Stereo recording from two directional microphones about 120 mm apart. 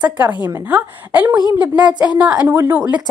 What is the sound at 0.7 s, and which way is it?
A woman's voice, 15° right (ahead or behind).